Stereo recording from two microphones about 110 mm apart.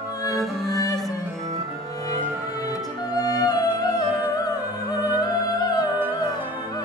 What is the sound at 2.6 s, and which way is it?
Music, 35° left (ahead or behind).